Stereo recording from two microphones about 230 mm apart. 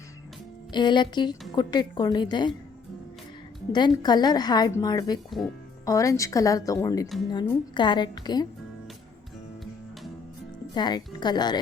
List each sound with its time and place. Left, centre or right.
0.7 s a woman's voice: centre
3.7 s a woman's voice: centre
10.8 s a woman's voice: centre